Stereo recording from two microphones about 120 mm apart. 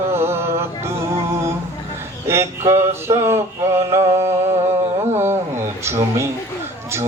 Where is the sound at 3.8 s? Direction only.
25° right (ahead or behind).